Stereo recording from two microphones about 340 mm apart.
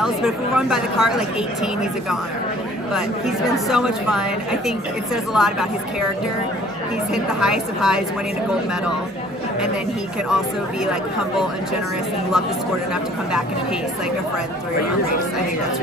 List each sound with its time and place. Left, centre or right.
0.0 s a woman's voice: centre
2.9 s a woman's voice: centre
7.3 s a woman's voice: centre